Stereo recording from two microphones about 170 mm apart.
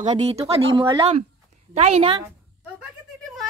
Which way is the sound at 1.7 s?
40° right (ahead or behind).